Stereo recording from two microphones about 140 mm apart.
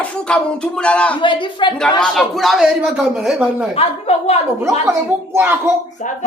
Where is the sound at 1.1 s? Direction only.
35° left (ahead or behind).